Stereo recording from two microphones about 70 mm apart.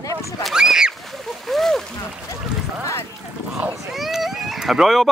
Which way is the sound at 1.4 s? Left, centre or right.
Centre.